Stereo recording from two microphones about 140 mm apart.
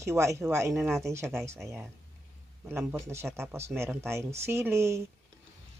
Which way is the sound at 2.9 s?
20° right (ahead or behind).